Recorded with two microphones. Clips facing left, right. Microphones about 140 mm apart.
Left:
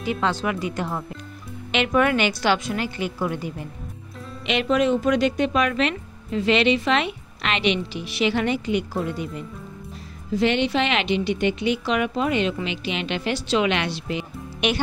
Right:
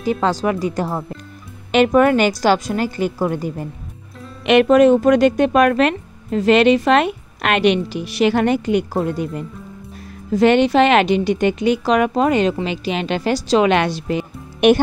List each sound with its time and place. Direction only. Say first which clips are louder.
0.0 s speech: right 6 dB; 40° right (ahead or behind)
4.5 s speech: right 10 dB; 55° right (ahead or behind)